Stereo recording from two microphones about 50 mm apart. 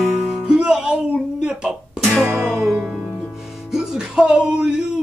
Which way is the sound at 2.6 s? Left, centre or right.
Centre.